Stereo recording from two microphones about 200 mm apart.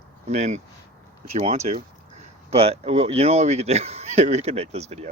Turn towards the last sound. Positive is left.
turn(degrees=-35)  # may be behind; listen again after turning